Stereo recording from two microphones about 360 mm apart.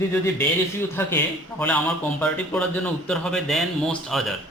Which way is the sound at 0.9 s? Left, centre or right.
Centre.